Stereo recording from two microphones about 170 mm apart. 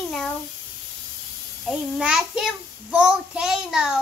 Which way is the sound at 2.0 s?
5° right (ahead or behind).